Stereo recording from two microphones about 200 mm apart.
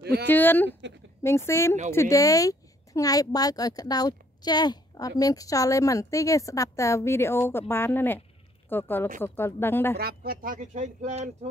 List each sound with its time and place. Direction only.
0.0 s a sound: 55° right (ahead or behind)
0.3 s a woman's voice: 10° left (ahead or behind)
9.9 s speech: 50° right (ahead or behind)